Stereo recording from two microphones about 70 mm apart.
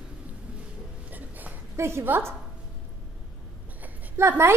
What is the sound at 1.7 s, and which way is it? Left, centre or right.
Speech, right.